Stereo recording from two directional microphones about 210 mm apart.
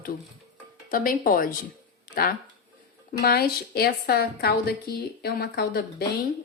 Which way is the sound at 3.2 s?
45° left (ahead or behind).